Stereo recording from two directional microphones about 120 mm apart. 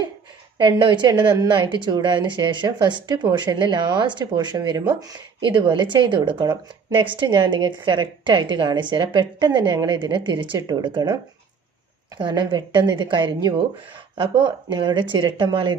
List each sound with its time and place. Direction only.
0.6 s a woman's voice: 40° right (ahead or behind)